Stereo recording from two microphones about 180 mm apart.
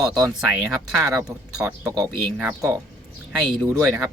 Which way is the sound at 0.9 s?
Centre (ahead or behind).